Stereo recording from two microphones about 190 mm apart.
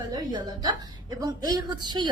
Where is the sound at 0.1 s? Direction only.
20° right (ahead or behind).